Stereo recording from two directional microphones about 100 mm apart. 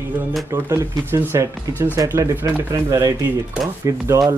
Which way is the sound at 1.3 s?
35° right (ahead or behind).